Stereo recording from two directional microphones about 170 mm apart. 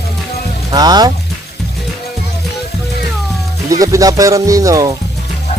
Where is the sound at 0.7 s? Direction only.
25° right (ahead or behind).